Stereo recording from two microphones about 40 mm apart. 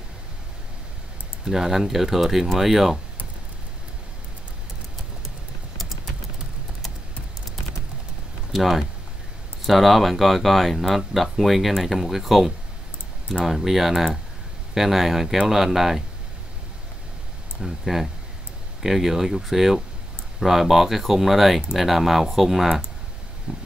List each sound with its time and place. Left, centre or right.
1.4 s speech: centre
8.5 s speech: centre
17.6 s speech: centre
23.5 s a sound: right